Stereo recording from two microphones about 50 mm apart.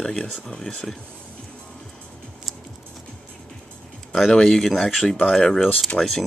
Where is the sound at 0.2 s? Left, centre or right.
Left.